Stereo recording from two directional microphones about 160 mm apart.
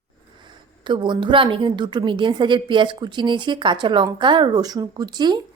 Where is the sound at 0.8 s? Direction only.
30° right (ahead or behind).